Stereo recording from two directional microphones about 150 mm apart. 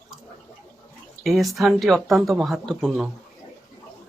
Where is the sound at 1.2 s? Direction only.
Centre (ahead or behind).